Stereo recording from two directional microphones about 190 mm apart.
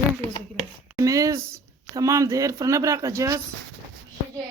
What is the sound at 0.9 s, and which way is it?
Speech, 15° right (ahead or behind).